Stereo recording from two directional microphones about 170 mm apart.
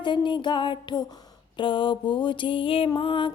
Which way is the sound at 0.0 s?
30° left (ahead or behind).